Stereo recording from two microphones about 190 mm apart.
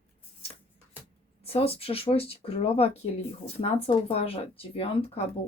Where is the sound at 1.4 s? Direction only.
30° left (ahead or behind).